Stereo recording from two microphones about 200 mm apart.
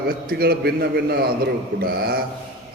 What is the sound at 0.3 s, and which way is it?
A man's voice, 50° right (ahead or behind).